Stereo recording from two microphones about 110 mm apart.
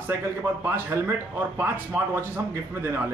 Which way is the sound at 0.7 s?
20° right (ahead or behind).